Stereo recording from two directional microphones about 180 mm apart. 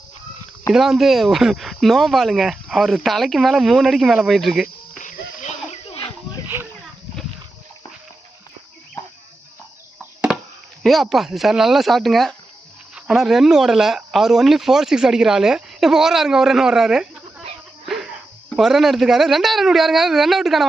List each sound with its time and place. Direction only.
0.7 s speech: centre (ahead or behind)
4.9 s a sound: 45° left (ahead or behind)
10.8 s speech: centre (ahead or behind)